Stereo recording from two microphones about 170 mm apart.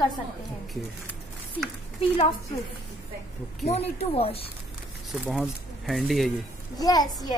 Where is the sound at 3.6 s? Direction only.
40° left (ahead or behind).